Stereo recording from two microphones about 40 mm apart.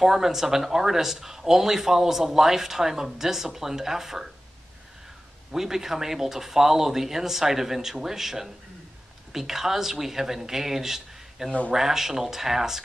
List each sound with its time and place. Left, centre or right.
0.0 s speech: centre
5.5 s speech: centre